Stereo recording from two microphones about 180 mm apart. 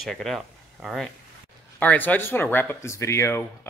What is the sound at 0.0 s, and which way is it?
Speech, centre (ahead or behind).